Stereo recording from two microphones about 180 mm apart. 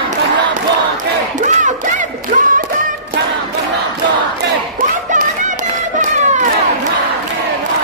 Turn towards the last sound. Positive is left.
turn(degrees=-40)  # may be behind; listen again after turning